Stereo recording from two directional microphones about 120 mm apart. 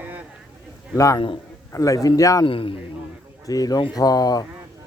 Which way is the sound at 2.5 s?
50° left (ahead or behind).